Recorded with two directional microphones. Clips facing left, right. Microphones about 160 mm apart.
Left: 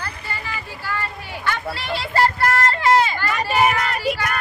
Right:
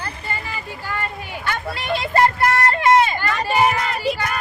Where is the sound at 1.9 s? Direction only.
20° right (ahead or behind).